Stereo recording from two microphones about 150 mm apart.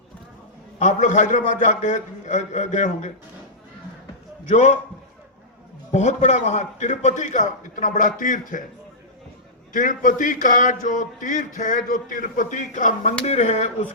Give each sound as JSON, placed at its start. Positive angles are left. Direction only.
{"t": 0.8, "sound": "a man's voice", "side_deg": 55}
{"t": 4.4, "sound": "a man's voice", "side_deg": 50}
{"t": 5.9, "sound": "speech", "side_deg": 50}
{"t": 9.7, "sound": "a man's voice", "side_deg": 60}